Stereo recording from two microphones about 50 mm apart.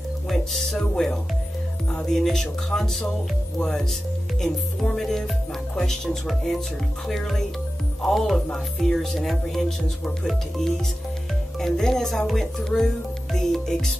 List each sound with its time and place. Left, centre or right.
0.3 s music: centre
2.1 s speech: centre
11.6 s speech: centre